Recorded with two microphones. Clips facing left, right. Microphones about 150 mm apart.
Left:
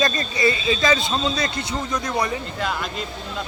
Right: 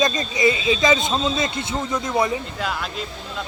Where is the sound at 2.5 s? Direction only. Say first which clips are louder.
Left 1 dB; centre (ahead or behind).